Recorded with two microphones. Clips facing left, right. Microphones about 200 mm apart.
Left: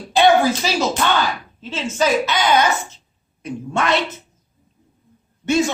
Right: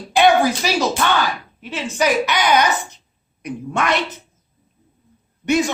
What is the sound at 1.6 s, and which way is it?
A woman's voice, 15° right (ahead or behind).